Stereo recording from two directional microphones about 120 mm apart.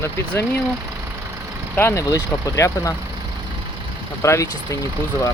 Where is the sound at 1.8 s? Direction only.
20° left (ahead or behind).